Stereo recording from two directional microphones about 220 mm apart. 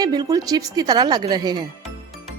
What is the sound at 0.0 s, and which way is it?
Speech, 15° right (ahead or behind).